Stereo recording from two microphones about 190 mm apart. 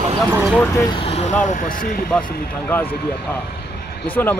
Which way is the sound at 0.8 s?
30° left (ahead or behind).